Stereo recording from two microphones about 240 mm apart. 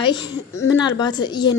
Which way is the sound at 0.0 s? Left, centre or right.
Centre.